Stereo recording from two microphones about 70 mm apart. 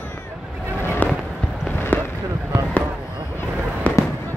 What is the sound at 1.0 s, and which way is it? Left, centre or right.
Fireworks, left.